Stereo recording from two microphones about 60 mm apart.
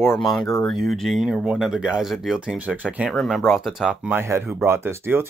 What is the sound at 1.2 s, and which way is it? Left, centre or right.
Speech, centre.